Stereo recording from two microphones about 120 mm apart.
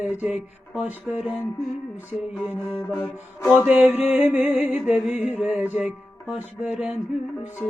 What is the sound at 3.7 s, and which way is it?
Music, 10° right (ahead or behind).